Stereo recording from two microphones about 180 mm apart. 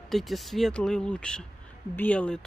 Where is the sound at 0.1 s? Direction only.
Centre (ahead or behind).